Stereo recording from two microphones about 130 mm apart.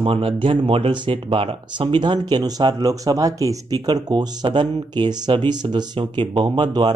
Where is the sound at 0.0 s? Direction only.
45° right (ahead or behind).